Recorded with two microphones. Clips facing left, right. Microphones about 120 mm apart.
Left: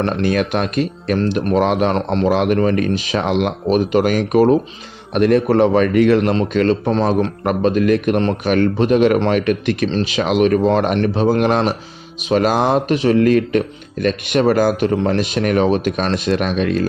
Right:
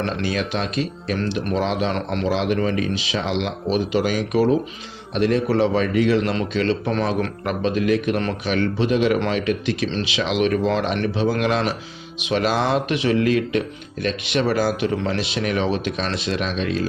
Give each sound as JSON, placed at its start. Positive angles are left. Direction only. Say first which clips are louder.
{"t": 0.0, "sound": "speech", "louder": "left 6 dB", "side_deg": 50}
{"t": 1.9, "sound": "speech", "louder": "left 6 dB", "side_deg": 35}
{"t": 2.2, "sound": "a man's voice", "louder": "left 6 dB", "side_deg": 55}
{"t": 6.8, "sound": "a man's voice", "louder": "left 6 dB", "side_deg": 35}